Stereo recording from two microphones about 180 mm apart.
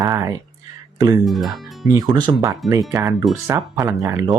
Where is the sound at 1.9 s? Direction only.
25° right (ahead or behind).